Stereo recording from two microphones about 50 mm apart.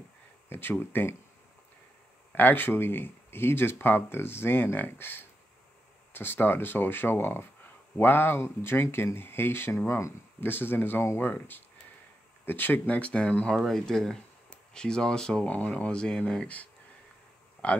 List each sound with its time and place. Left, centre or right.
0.5 s speech: left
2.3 s speech: left
12.9 s speech: left
13.6 s speech: centre
15.4 s speech: left
17.6 s speech: left